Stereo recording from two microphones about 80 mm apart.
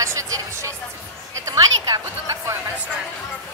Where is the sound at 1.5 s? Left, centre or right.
Right.